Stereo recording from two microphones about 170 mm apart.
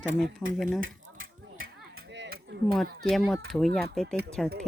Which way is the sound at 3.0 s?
Centre (ahead or behind).